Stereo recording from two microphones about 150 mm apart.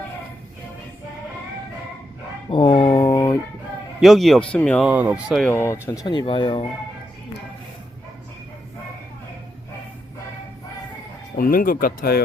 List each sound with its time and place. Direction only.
2.5 s a sound: 35° left (ahead or behind)
2.9 s a sound: 25° left (ahead or behind)
4.0 s speech: centre (ahead or behind)
4.9 s speech: 10° right (ahead or behind)
5.5 s speech: 15° left (ahead or behind); by 6.7 s 35° left (ahead or behind)
11.3 s speech: 75° left (ahead or behind)